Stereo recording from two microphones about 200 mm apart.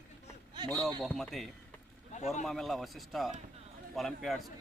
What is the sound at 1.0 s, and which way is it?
A man's voice, centre (ahead or behind).